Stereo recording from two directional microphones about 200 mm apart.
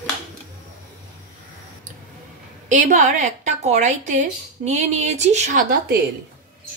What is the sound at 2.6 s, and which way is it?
A woman's voice, 40° right (ahead or behind).